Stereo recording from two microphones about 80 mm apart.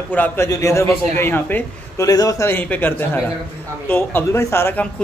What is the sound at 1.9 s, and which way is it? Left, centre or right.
Speech, left.